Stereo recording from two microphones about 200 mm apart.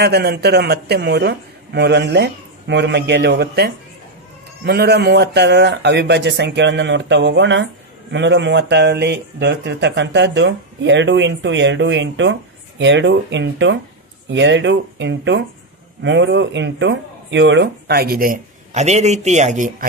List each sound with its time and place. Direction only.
0.0 s speech: 55° right (ahead or behind); by 19.9 s 40° right (ahead or behind)